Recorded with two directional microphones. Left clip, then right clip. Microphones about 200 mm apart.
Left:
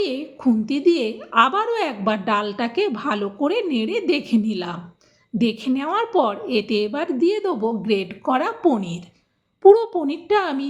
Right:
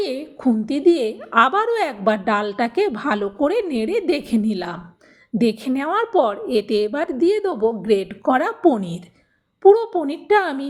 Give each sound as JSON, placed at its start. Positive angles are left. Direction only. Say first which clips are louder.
{"t": 0.0, "sound": "a woman's voice", "louder": "even", "side_deg": -25}
{"t": 9.6, "sound": "a woman's voice", "louder": "even", "side_deg": 0}
{"t": 10.0, "sound": "a woman's voice", "louder": "right 2 dB", "side_deg": -25}